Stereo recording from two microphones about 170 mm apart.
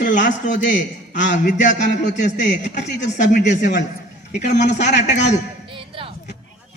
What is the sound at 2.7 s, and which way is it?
Speech, 45° left (ahead or behind).